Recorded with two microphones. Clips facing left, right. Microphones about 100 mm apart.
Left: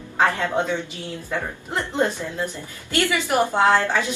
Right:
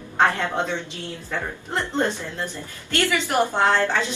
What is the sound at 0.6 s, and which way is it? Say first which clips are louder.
A woman's voice: left 2 dB; 20° left (ahead or behind).